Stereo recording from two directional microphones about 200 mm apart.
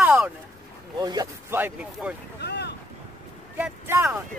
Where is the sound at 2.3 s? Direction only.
55° left (ahead or behind).